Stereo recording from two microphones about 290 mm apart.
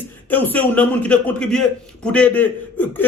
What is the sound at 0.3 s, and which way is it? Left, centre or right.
A man's voice, centre.